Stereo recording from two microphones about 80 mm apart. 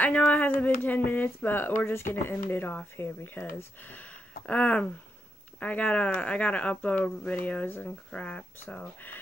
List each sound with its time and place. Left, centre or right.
0.0 s speech: centre